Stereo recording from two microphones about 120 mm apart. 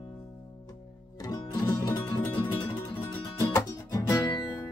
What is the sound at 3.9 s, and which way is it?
Music, 30° left (ahead or behind).